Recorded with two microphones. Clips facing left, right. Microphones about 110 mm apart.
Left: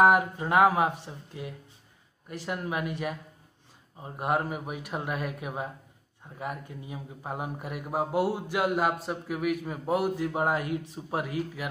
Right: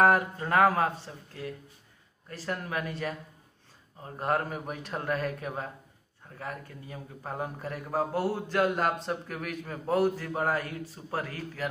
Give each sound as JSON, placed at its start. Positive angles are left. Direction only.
{"t": 0.0, "sound": "a man's voice", "side_deg": 15}